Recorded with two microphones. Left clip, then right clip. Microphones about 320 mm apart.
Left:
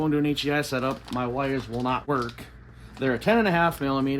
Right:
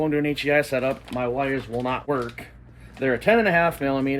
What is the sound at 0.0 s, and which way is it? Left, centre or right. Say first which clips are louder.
Speech: right 2 dB; centre.